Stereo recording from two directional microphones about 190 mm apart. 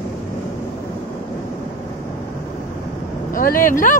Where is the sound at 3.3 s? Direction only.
50° left (ahead or behind).